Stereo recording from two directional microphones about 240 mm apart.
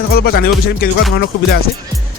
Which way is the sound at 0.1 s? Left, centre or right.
Left.